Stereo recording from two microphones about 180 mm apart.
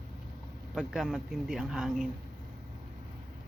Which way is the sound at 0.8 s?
Centre (ahead or behind).